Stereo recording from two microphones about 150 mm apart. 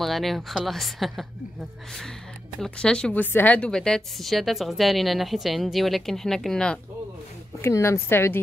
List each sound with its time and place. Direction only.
0.0 s a woman's voice: centre (ahead or behind)
7.6 s a woman's voice: 15° left (ahead or behind)